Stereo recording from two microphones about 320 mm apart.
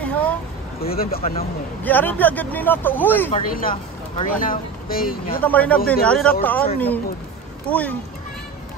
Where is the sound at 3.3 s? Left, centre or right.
Left.